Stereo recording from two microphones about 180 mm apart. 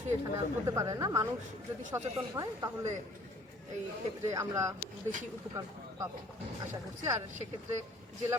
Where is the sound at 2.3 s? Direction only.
20° right (ahead or behind).